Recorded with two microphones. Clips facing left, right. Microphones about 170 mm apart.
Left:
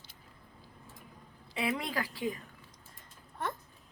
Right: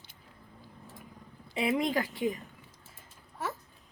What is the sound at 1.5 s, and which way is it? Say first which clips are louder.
Speech: right 5 dB; 20° right (ahead or behind).